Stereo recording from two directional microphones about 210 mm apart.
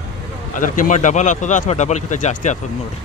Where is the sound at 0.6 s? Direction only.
40° left (ahead or behind).